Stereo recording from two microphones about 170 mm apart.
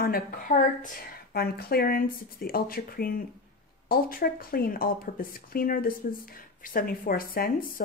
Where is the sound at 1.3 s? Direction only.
65° left (ahead or behind).